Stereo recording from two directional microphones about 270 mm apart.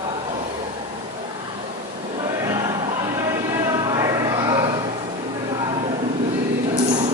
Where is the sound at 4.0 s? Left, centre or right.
Centre.